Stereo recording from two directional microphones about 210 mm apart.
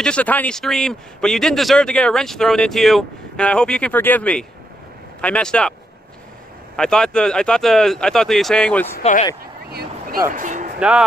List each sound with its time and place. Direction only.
0.0 s a man's voice: 5° left (ahead or behind)
6.8 s a man's voice: 5° left (ahead or behind)
9.0 s speech: 35° left (ahead or behind)
9.7 s vehicle: 50° right (ahead or behind)
10.3 s a sound: 40° right (ahead or behind)
10.8 s speech: 5° right (ahead or behind)